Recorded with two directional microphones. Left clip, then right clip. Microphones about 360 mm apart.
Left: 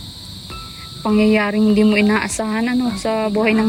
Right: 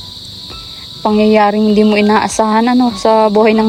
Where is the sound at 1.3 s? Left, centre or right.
Centre.